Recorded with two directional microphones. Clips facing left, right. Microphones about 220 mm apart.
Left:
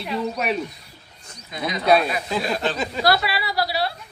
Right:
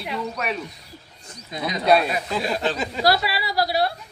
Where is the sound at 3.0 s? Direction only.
35° right (ahead or behind).